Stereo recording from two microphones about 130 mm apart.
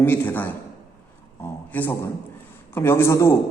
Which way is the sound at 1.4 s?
20° left (ahead or behind).